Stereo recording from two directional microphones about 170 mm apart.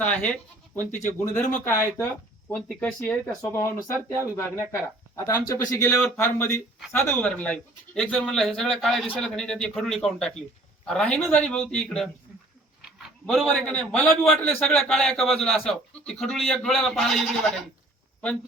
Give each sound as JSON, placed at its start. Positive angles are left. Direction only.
{"t": 0.0, "sound": "speech", "side_deg": 10}
{"t": 1.4, "sound": "speech", "side_deg": 45}
{"t": 1.6, "sound": "speech", "side_deg": 15}
{"t": 2.5, "sound": "a man's voice", "side_deg": 5}
{"t": 3.4, "sound": "speech", "side_deg": 15}
{"t": 3.9, "sound": "speech", "side_deg": -15}
{"t": 4.4, "sound": "a man's voice", "side_deg": 15}